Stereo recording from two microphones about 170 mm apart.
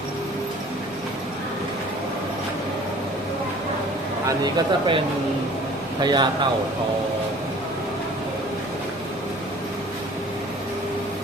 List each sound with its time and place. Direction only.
4.3 s speech: 25° right (ahead or behind)